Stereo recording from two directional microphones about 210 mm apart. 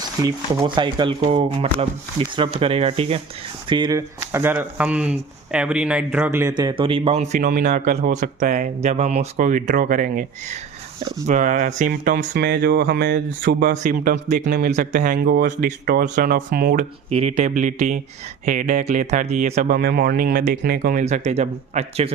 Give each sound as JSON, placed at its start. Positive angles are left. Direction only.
{"t": 0.2, "sound": "speech", "side_deg": -15}
{"t": 6.6, "sound": "speech", "side_deg": -20}
{"t": 17.1, "sound": "speech", "side_deg": -30}
{"t": 19.7, "sound": "speech", "side_deg": -45}